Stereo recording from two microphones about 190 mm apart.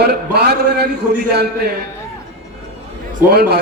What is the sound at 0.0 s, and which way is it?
Speech, 60° right (ahead or behind).